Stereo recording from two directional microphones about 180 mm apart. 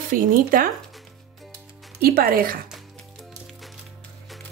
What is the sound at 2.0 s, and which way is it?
Speech, 55° right (ahead or behind).